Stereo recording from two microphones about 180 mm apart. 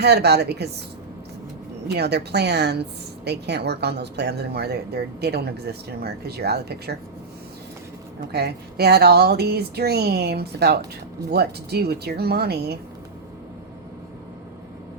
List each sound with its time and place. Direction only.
0.0 s a woman's voice: 65° right (ahead or behind)
1.9 s a woman's voice: 65° right (ahead or behind)
8.3 s a woman's voice: 65° right (ahead or behind)